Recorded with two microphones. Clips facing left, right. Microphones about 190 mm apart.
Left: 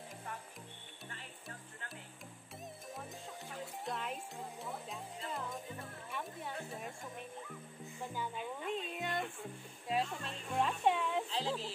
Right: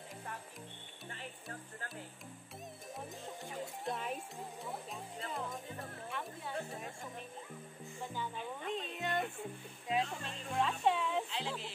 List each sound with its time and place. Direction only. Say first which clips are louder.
3.8 s music: right 1 dB; centre (ahead or behind)
8.1 s music: left 1 dB; 10° left (ahead or behind)
8.7 s a sound: right 3 dB; 5° left (ahead or behind)
9.8 s speech: even; centre (ahead or behind)
11.2 s music: left 3 dB; 35° left (ahead or behind)